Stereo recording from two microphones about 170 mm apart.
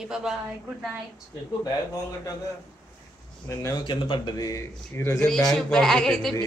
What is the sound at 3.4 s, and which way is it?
A man's voice, 20° left (ahead or behind).